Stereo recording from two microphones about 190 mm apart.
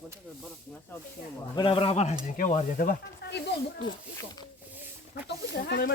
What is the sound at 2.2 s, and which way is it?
Speech, 45° left (ahead or behind).